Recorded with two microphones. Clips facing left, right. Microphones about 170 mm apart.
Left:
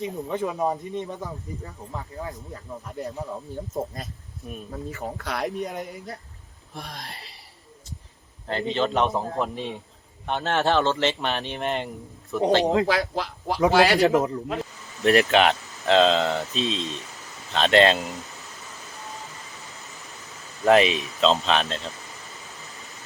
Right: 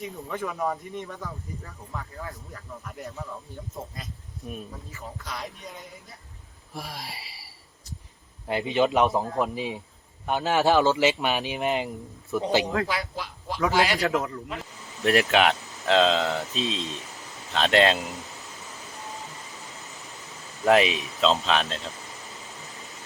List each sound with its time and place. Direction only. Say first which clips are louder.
0.3 s speech: left 3 dB; 20° left (ahead or behind)
4.9 s speech: left 7 dB; 65° left (ahead or behind)
6.7 s speech: right 1 dB; 5° right (ahead or behind)
12.9 s speech: left 7 dB; 75° left (ahead or behind)
14.0 s speech: left 6 dB; 20° left (ahead or behind)
15.0 s speech: left 3 dB; 5° right (ahead or behind)
20.7 s speech: left 2 dB; 5° right (ahead or behind)